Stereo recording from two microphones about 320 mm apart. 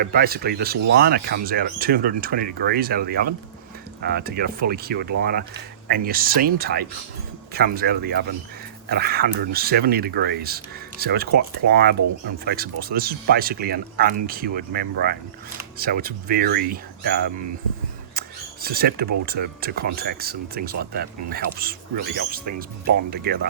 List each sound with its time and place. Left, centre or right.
0.0 s speech: right
18.1 s a sound: right
19.2 s speech: right